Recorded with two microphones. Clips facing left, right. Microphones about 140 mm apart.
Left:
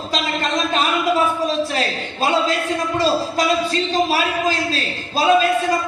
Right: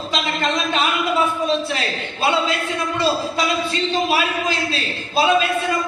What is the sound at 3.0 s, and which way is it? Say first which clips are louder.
A man's voice: left 1 dB; 40° left (ahead or behind).